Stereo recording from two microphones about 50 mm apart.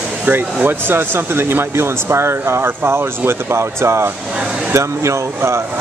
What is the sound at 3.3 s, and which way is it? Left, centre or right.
Speech, right.